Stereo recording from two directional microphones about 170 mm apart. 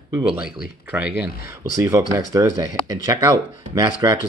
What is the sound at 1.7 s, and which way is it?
Speech, 20° right (ahead or behind).